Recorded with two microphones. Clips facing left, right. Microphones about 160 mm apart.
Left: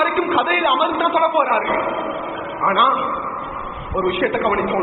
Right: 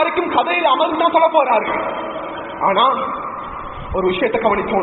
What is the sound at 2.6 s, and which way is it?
A man's voice, 30° right (ahead or behind).